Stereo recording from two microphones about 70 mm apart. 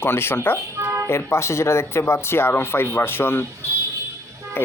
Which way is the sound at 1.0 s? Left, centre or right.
Left.